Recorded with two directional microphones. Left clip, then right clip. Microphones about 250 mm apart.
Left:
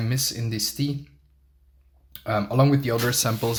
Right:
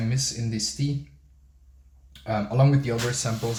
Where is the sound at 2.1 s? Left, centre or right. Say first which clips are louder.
Left 3 dB; left.